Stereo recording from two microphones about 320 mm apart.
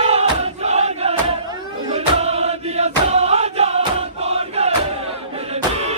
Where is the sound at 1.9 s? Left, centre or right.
Centre.